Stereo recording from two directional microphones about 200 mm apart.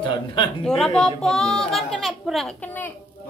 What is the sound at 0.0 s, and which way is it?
Speech, 25° left (ahead or behind).